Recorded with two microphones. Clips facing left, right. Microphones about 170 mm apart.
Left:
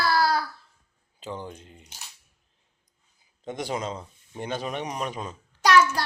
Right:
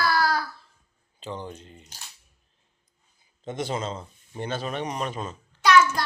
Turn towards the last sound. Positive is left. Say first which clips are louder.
# right 1 dB
turn(degrees=40)  # may be behind; listen again after turning